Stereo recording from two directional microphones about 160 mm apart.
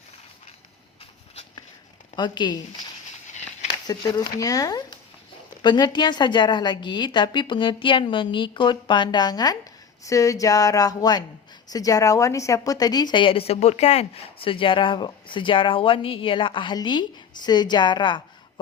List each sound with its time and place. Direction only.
2.1 s a woman's voice: 30° left (ahead or behind)
3.3 s a sound: 45° left (ahead or behind)
3.8 s a woman's voice: 25° left (ahead or behind)